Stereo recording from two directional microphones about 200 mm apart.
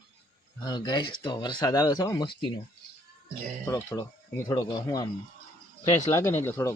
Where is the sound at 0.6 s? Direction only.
20° left (ahead or behind).